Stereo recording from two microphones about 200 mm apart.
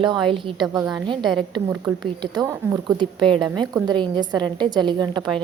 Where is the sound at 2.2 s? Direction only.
20° right (ahead or behind).